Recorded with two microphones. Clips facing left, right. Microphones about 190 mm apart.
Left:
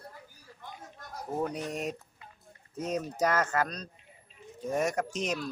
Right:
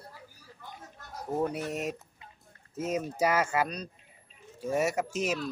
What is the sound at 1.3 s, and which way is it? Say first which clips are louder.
Speech: right 2 dB; 10° right (ahead or behind).